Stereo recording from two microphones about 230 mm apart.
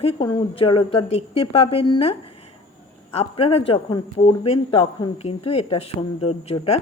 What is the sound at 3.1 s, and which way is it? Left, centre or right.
A man's voice, left.